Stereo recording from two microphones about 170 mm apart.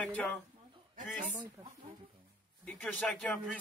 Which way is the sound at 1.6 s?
15° right (ahead or behind).